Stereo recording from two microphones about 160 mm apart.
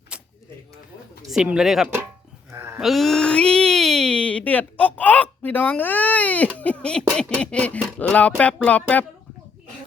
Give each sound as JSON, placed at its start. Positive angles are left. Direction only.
{"t": 0.1, "sound": "a sound", "side_deg": -5}
{"t": 1.3, "sound": "speech", "side_deg": -5}
{"t": 2.5, "sound": "sheep", "side_deg": -15}
{"t": 2.8, "sound": "speech", "side_deg": 0}